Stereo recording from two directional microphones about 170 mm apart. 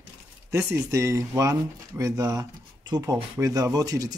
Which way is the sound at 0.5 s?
15° right (ahead or behind).